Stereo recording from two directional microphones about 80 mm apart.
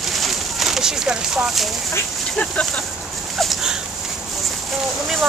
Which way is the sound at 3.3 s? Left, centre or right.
Centre.